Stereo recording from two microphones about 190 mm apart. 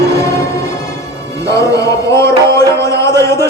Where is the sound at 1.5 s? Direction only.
15° left (ahead or behind).